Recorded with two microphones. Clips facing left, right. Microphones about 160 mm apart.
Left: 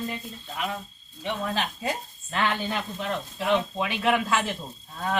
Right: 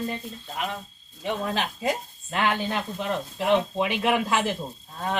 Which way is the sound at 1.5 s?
15° right (ahead or behind).